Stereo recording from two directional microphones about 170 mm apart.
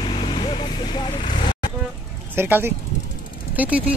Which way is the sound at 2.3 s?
10° right (ahead or behind).